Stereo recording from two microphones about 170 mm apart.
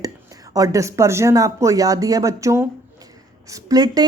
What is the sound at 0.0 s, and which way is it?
Speech, 20° right (ahead or behind).